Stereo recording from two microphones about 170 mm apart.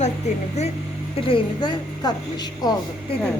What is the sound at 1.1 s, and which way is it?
Speech, 30° left (ahead or behind).